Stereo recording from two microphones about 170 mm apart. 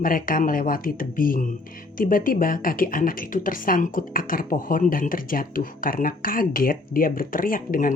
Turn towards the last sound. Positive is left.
turn(degrees=55)  # may be behind; listen again after turning